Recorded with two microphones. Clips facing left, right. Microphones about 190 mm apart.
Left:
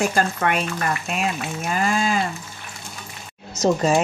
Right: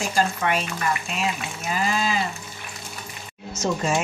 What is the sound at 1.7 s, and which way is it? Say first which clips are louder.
Speech: left 3 dB; 50° left (ahead or behind).